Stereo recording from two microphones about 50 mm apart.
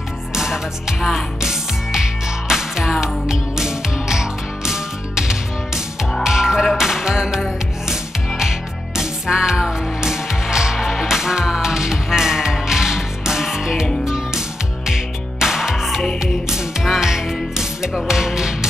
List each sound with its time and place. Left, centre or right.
0.3 s music: centre